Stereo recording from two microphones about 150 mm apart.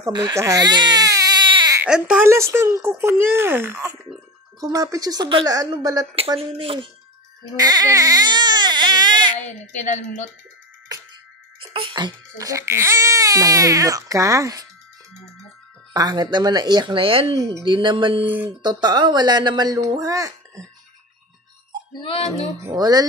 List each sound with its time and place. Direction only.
0.0 s baby cry: 25° right (ahead or behind)
1.8 s speech: 5° right (ahead or behind)
2.2 s speech: 15° right (ahead or behind); by 6.9 s 35° right (ahead or behind)
7.5 s baby cry: 25° right (ahead or behind)
9.4 s a woman's voice: 50° left (ahead or behind)
11.7 s speech: 35° right (ahead or behind)
15.9 s speech: 25° right (ahead or behind)
18.2 s speech: 10° right (ahead or behind)
18.6 s speech: 30° right (ahead or behind)
22.0 s speech: 40° left (ahead or behind)
22.7 s speech: 25° right (ahead or behind)